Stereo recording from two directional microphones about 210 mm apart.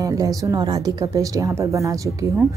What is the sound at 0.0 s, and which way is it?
A woman's voice, 15° right (ahead or behind).